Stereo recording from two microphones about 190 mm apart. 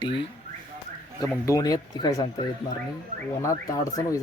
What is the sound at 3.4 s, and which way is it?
Speech, 15° left (ahead or behind).